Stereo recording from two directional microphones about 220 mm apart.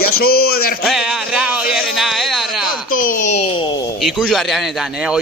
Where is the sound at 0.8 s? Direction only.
Centre (ahead or behind).